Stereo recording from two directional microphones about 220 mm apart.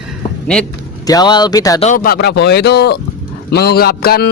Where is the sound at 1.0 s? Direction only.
15° left (ahead or behind).